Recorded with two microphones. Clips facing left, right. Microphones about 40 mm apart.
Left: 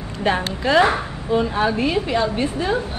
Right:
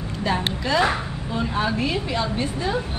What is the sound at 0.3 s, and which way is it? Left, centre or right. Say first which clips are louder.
A woman's voice: left 4 dB; left.